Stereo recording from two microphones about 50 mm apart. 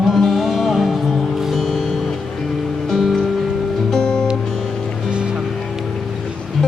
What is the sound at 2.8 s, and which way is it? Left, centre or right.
Music, centre.